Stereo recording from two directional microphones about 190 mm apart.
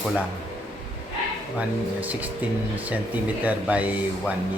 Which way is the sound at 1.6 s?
10° right (ahead or behind).